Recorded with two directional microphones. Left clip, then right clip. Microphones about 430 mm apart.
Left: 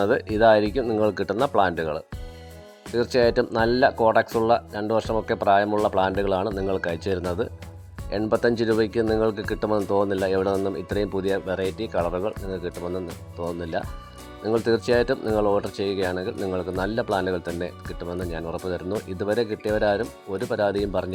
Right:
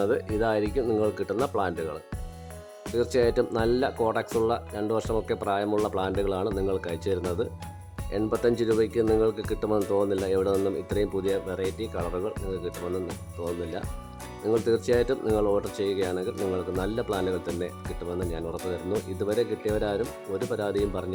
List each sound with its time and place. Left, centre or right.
0.0 s speech: centre